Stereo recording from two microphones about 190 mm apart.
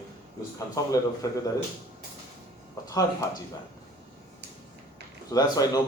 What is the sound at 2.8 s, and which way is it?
Speech, 15° left (ahead or behind).